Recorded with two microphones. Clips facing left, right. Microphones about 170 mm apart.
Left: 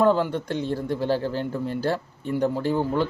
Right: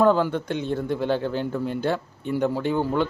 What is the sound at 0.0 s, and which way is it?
Speech, 30° left (ahead or behind).